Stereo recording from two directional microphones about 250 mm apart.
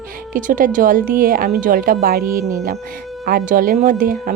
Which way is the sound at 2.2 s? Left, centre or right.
Centre.